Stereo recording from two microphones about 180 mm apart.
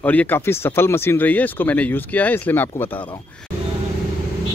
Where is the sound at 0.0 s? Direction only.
10° left (ahead or behind).